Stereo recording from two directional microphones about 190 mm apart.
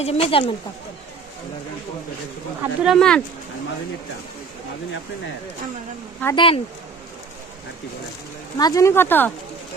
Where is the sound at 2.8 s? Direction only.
Centre (ahead or behind).